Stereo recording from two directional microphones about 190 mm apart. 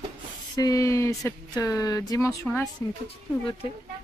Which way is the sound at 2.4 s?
Centre (ahead or behind).